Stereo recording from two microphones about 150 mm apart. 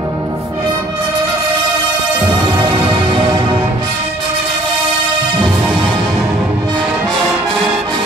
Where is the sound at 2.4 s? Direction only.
30° right (ahead or behind).